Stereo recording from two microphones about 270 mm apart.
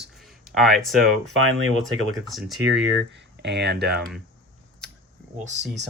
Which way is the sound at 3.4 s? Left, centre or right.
Right.